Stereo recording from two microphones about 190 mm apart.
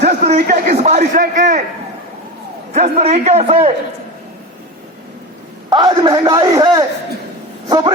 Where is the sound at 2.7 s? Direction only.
35° right (ahead or behind).